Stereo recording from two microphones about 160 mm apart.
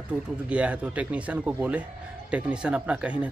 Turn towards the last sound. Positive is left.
turn(degrees=-10)  # may be behind; listen again after turning